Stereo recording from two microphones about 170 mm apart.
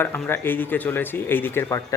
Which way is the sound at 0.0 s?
15° left (ahead or behind).